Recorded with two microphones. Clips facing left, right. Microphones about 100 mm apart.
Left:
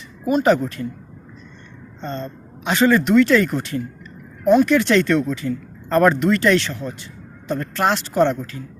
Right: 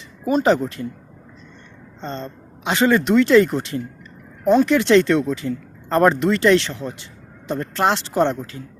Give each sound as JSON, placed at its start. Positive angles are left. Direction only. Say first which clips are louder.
{"t": 0.3, "sound": "speech", "louder": "left 1 dB", "side_deg": -30}
{"t": 2.0, "sound": "speech", "louder": "left 1 dB", "side_deg": -25}